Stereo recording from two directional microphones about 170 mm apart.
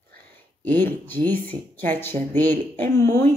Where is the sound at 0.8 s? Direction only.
10° left (ahead or behind).